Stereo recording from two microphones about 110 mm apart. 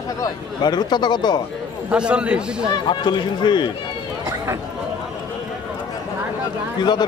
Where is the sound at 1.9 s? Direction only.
10° right (ahead or behind).